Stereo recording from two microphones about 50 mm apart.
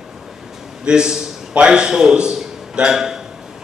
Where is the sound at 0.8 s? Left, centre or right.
Centre.